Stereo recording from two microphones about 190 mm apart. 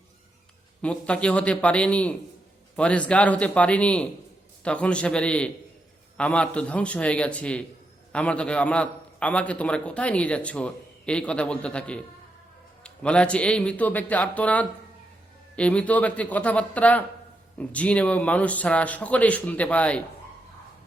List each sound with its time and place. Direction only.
0.8 s a man's voice: 5° left (ahead or behind)